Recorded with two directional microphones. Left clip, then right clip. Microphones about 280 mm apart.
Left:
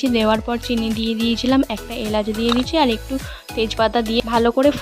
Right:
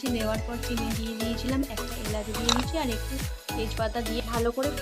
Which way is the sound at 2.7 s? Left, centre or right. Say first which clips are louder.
Left 13 dB; left.